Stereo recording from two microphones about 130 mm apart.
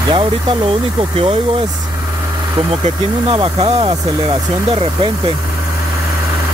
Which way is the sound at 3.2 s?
45° right (ahead or behind).